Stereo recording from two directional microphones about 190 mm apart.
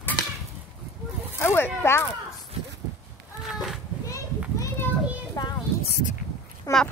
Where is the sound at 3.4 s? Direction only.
Centre (ahead or behind).